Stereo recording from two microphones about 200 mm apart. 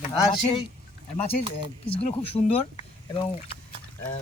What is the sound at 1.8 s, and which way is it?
Speech, 30° left (ahead or behind).